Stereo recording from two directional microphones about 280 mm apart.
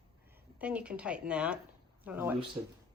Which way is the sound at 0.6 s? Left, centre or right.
Centre.